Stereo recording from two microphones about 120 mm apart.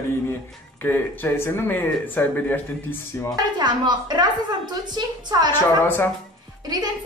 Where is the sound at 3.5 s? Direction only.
40° right (ahead or behind).